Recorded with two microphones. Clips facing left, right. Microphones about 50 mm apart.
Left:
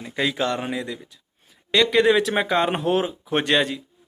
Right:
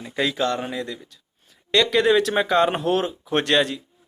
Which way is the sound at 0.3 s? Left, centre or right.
Left.